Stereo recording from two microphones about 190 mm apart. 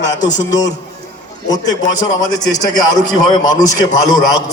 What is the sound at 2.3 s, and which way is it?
A man's voice, 20° left (ahead or behind).